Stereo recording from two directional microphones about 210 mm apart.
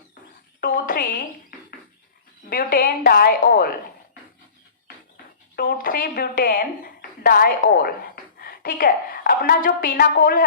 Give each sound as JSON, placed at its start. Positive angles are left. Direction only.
{"t": 0.6, "sound": "a sound", "side_deg": 45}
{"t": 2.5, "sound": "a woman's voice", "side_deg": 45}
{"t": 5.5, "sound": "a woman's voice", "side_deg": 45}